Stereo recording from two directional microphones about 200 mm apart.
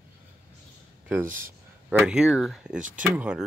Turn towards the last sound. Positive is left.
turn(degrees=-5)  # may be behind; listen again after turning